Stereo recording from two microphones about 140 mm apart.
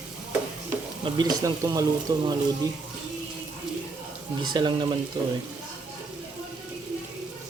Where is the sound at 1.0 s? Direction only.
30° right (ahead or behind).